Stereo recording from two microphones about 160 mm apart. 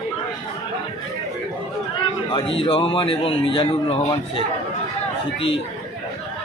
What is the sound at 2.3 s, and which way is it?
A man's voice, 30° left (ahead or behind).